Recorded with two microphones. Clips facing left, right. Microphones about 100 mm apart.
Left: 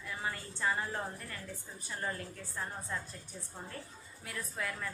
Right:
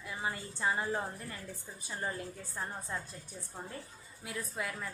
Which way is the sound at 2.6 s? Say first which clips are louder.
Even; 20° right (ahead or behind).